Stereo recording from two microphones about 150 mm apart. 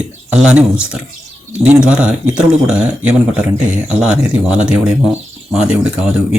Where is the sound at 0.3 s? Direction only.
10° right (ahead or behind).